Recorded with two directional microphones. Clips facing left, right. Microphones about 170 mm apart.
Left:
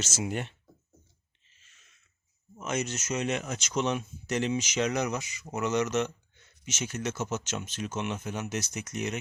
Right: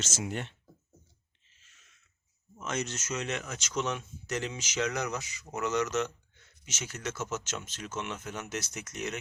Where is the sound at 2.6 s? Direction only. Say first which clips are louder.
Left 3 dB; 10° left (ahead or behind).